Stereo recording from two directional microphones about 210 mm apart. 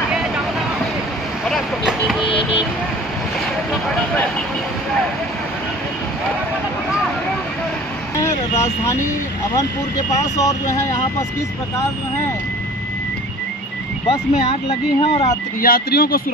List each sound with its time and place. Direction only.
1.5 s vehicle: centre (ahead or behind)
10.2 s speech: 15° left (ahead or behind)
14.0 s speech: 25° left (ahead or behind)
15.6 s speech: 45° left (ahead or behind)